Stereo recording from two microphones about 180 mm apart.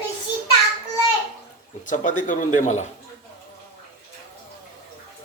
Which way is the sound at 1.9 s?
45° left (ahead or behind).